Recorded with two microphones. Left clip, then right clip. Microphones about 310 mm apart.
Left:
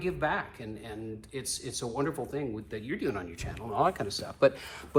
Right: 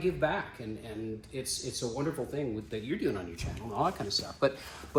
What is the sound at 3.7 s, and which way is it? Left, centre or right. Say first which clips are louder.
Speech: left 3 dB; left.